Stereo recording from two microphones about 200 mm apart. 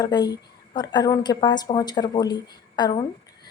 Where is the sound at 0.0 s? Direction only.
20° left (ahead or behind).